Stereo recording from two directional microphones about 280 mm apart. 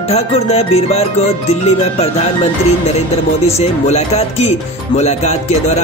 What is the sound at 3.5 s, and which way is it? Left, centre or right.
Music, left.